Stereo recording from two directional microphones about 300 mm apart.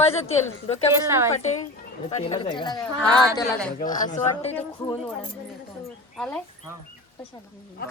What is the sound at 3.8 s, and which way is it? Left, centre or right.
Speech, left.